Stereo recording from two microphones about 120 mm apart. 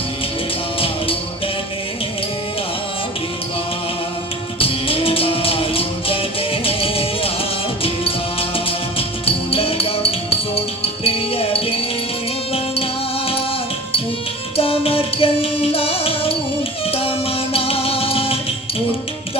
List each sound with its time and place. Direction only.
4.6 s music: 50° left (ahead or behind)
14.5 s music: 50° left (ahead or behind)